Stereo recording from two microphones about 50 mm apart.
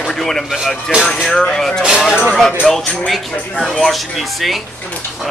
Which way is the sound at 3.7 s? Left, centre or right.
Centre.